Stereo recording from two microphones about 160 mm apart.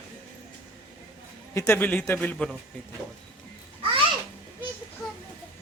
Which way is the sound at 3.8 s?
35° right (ahead or behind).